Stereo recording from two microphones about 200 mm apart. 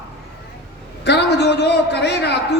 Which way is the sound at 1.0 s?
55° left (ahead or behind).